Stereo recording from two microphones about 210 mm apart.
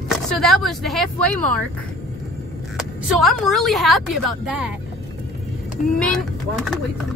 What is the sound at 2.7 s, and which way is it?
Speech, centre (ahead or behind).